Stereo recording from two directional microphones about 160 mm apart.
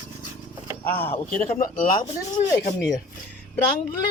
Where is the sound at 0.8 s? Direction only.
15° left (ahead or behind).